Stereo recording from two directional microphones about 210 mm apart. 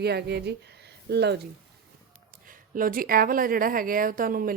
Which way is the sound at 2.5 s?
40° right (ahead or behind).